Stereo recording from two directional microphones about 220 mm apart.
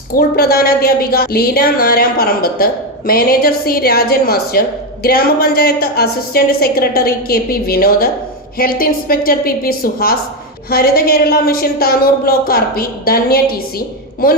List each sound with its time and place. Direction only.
0.1 s a woman's voice: 45° left (ahead or behind)